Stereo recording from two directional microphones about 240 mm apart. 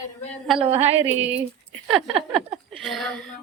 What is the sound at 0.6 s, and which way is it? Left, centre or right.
Speech, right.